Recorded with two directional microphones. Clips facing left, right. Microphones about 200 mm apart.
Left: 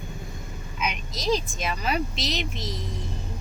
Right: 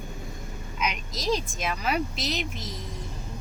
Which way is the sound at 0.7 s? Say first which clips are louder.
Even; centre (ahead or behind).